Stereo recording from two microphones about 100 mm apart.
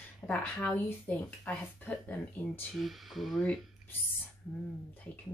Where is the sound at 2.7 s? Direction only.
Centre (ahead or behind).